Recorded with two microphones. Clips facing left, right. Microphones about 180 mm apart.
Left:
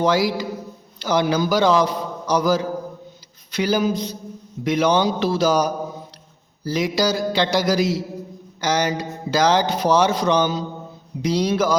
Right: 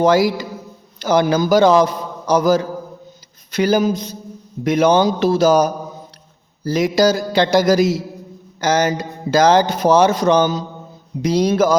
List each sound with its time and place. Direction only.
0.0 s a man's voice: 50° right (ahead or behind)
6.7 s speech: 45° right (ahead or behind)